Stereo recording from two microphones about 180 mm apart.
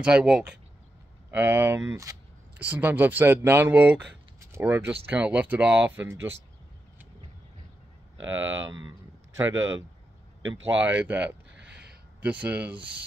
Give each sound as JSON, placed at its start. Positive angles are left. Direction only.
{"t": 0.0, "sound": "speech", "side_deg": -5}
{"t": 8.2, "sound": "speech", "side_deg": -90}
{"t": 10.8, "sound": "speech", "side_deg": -10}
{"t": 11.5, "sound": "a sound", "side_deg": -65}
{"t": 12.2, "sound": "speech", "side_deg": -10}